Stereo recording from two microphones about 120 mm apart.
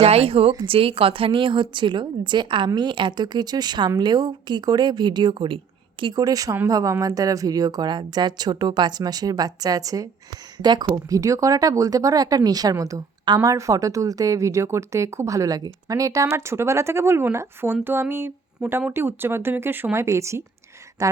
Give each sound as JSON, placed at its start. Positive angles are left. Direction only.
{"t": 0.0, "sound": "a woman's voice", "side_deg": -55}